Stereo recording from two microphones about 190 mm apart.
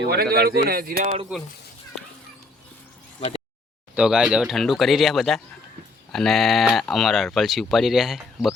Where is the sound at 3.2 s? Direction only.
30° left (ahead or behind).